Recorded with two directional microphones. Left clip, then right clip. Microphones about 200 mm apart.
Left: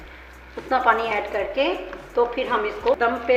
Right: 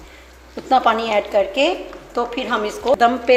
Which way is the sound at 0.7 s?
50° right (ahead or behind).